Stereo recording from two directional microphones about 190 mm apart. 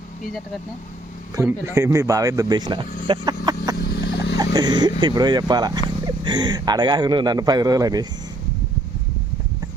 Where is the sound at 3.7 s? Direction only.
55° left (ahead or behind).